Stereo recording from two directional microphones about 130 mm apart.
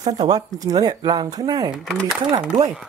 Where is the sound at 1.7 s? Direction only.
Centre (ahead or behind).